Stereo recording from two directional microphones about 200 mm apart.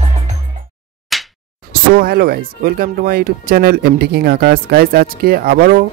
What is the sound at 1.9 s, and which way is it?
Speech, 50° right (ahead or behind).